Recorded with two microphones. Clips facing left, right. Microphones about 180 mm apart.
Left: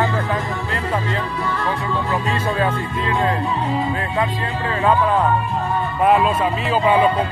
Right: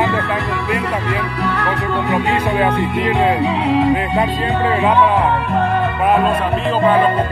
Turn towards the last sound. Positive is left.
turn(degrees=-70)  # may be behind; listen again after turning